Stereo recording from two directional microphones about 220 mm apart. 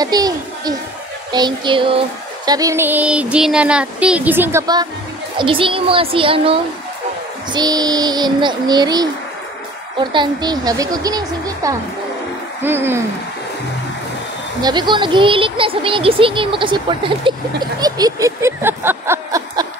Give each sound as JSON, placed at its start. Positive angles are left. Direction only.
{"t": 0.0, "sound": "a child's voice", "side_deg": -15}
{"t": 1.3, "sound": "child singing", "side_deg": -20}
{"t": 5.4, "sound": "speech", "side_deg": -25}
{"t": 7.5, "sound": "child singing", "side_deg": -20}
{"t": 14.6, "sound": "speech", "side_deg": -20}